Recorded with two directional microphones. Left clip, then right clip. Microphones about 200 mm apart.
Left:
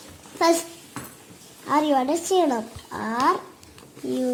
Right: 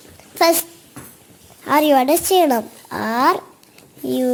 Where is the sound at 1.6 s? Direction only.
45° right (ahead or behind).